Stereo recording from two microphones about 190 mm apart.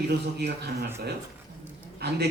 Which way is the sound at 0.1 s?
60° right (ahead or behind).